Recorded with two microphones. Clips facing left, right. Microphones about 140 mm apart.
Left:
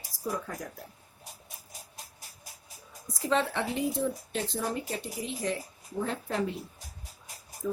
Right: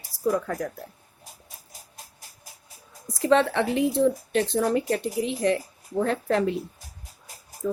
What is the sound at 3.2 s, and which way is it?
Speech, 75° right (ahead or behind).